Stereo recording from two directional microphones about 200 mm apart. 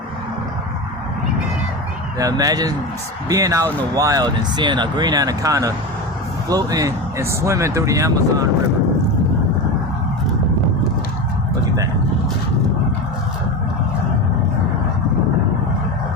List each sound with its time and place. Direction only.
2.1 s speech: 15° right (ahead or behind)